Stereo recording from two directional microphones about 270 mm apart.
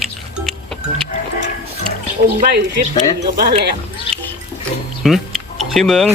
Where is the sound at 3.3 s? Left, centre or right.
Right.